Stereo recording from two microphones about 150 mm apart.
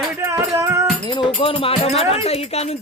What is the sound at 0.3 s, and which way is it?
Music, 20° right (ahead or behind).